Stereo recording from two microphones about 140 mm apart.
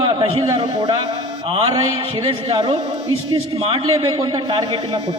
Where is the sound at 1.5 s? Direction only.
45° right (ahead or behind).